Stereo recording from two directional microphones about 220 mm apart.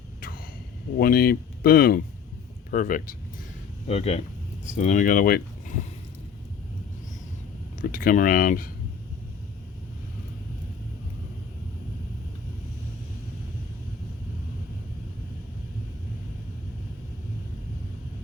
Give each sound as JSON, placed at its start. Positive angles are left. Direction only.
{"t": 0.9, "sound": "speech", "side_deg": 45}
{"t": 7.8, "sound": "speech", "side_deg": 40}